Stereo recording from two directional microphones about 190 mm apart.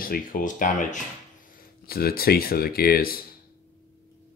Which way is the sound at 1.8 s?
50° left (ahead or behind).